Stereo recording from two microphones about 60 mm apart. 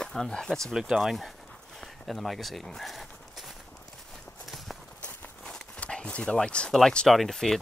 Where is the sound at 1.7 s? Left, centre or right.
Centre.